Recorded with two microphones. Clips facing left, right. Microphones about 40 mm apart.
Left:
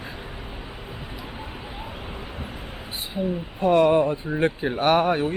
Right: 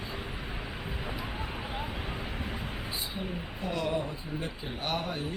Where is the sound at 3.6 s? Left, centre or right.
Left.